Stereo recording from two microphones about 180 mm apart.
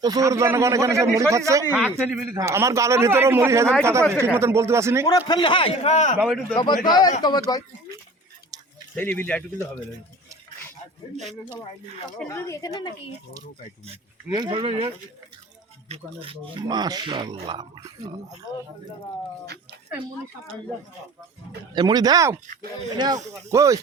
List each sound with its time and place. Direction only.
0.0 s a man's voice: 20° right (ahead or behind)
1.7 s a man's voice: 5° right (ahead or behind)
5.0 s speech: 25° left (ahead or behind); by 6.1 s 40° left (ahead or behind)
6.1 s speech: 5° right (ahead or behind)
6.6 s speech: 25° left (ahead or behind)
9.0 s speech: 10° left (ahead or behind)
12.2 s speech: 15° left (ahead or behind)
14.3 s speech: 20° right (ahead or behind)
15.9 s speech: 30° right (ahead or behind)
21.8 s a man's voice: 20° right (ahead or behind)